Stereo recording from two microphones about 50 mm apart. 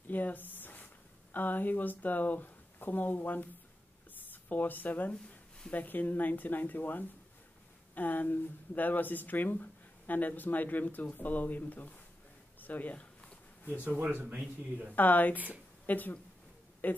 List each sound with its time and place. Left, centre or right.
0.1 s a sound: left
1.3 s speech: left
13.8 s speech: right
15.0 s speech: left
15.3 s speech: right
15.9 s speech: left